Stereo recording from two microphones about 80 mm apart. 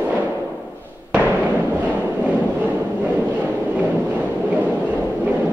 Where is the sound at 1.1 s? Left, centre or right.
Right.